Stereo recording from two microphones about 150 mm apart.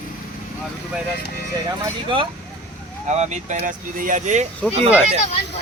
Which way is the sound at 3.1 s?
50° right (ahead or behind).